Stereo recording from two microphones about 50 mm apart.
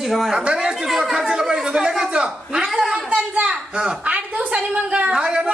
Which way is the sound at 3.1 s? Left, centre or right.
Right.